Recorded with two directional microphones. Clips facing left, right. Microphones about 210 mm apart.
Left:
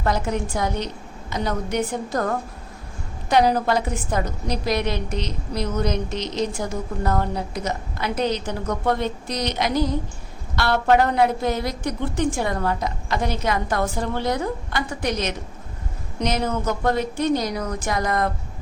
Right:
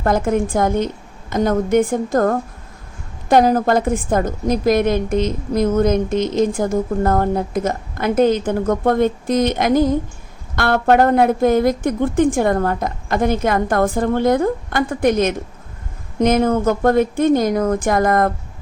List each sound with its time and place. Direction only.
0.0 s a woman's voice: 50° right (ahead or behind)